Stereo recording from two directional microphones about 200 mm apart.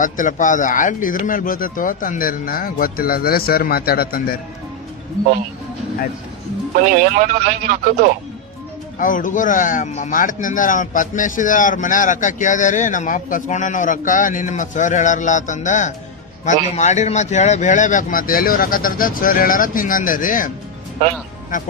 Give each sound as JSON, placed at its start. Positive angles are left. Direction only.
{"t": 0.0, "sound": "speech", "side_deg": 40}
{"t": 6.8, "sound": "speech", "side_deg": -40}
{"t": 9.0, "sound": "speech", "side_deg": 40}